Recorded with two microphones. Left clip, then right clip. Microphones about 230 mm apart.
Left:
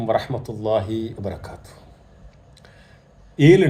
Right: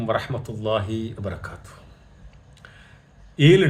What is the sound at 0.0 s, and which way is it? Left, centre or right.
Speech, centre.